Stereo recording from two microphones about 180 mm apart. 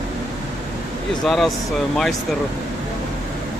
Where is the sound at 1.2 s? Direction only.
Centre (ahead or behind).